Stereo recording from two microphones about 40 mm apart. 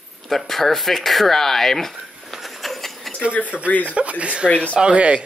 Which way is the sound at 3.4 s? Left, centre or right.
Right.